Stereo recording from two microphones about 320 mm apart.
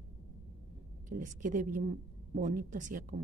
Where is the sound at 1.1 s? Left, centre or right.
Right.